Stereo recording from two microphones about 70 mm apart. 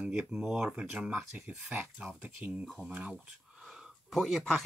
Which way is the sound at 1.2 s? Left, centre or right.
Centre.